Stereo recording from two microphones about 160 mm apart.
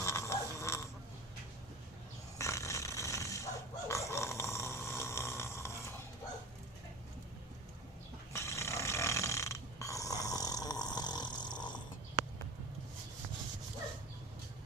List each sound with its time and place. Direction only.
0.0 s a sound: 15° left (ahead or behind)
2.4 s pig: 20° left (ahead or behind)
8.3 s snoring: 15° left (ahead or behind)